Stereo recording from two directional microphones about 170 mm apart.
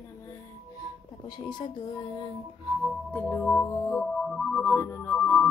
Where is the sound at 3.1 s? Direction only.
10° left (ahead or behind).